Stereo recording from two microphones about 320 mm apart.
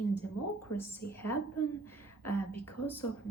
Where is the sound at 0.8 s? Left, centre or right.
Centre.